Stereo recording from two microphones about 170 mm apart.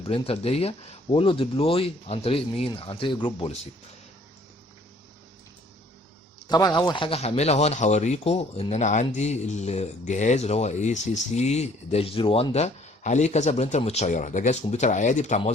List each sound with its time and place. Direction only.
0.0 s speech: 35° left (ahead or behind)
6.5 s speech: 25° left (ahead or behind); by 15.5 s 45° left (ahead or behind)